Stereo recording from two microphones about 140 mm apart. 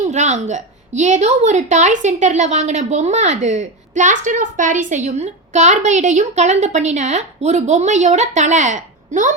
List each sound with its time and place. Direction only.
0.0 s a woman's voice: 55° right (ahead or behind)